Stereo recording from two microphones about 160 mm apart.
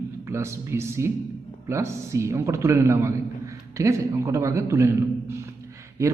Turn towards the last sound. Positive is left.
turn(degrees=-20)  # may be behind; listen again after turning